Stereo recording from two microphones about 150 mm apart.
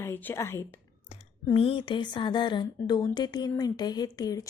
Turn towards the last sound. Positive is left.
turn(degrees=25)  # may be behind; listen again after turning